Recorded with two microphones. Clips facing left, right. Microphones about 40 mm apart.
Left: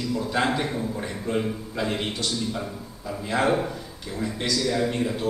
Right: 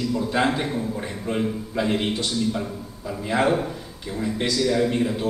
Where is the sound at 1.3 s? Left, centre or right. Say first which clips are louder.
Right 2 dB; centre.